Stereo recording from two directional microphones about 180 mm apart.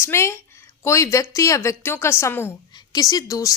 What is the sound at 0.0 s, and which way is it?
A woman's voice, 15° left (ahead or behind).